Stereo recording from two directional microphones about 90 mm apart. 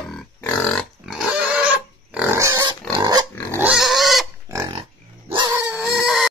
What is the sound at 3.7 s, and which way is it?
Pig, centre (ahead or behind).